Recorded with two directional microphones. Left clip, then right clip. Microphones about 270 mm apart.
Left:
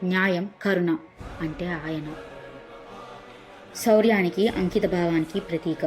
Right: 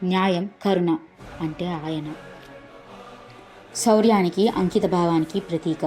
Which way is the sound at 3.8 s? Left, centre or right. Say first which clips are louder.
Right 1 dB; centre.